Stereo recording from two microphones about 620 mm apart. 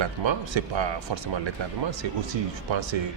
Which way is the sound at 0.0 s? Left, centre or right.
Right.